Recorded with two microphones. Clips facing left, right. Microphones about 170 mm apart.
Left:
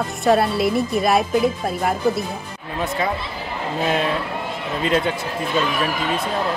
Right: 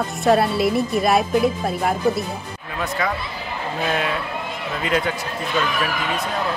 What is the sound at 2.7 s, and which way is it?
Speech, 25° left (ahead or behind).